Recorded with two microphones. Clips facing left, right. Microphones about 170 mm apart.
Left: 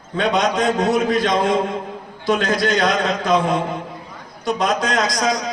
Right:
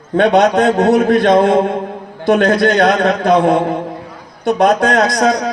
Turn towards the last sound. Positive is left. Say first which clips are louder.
# right 7 dB
turn(degrees=-60)  # may be behind; listen again after turning